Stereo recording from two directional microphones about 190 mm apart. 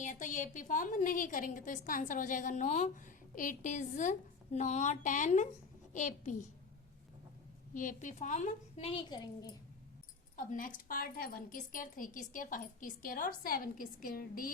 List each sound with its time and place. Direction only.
0.0 s a woman's voice: 40° left (ahead or behind)
7.7 s a woman's voice: 45° left (ahead or behind); by 9.5 s 20° left (ahead or behind)
10.3 s a woman's voice: 45° left (ahead or behind)